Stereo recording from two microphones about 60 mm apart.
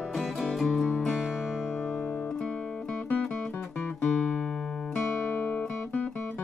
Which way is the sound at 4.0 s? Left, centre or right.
Centre.